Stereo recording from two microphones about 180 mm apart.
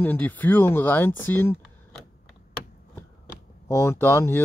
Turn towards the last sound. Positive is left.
turn(degrees=15)  # may be behind; listen again after turning